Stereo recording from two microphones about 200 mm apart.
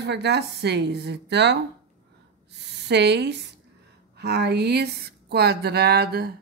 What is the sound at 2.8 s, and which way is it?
Speech, 55° right (ahead or behind).